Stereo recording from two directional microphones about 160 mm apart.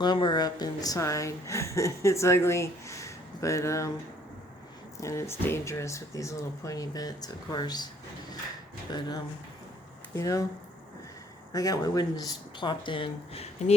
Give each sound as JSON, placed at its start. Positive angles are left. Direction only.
{"t": 0.0, "sound": "a woman's voice", "side_deg": 30}
{"t": 4.9, "sound": "a woman's voice", "side_deg": 20}
{"t": 8.9, "sound": "a woman's voice", "side_deg": 25}
{"t": 11.5, "sound": "a woman's voice", "side_deg": 20}